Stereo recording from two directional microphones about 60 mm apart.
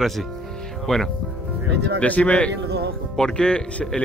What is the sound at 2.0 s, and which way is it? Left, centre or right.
Speech, left.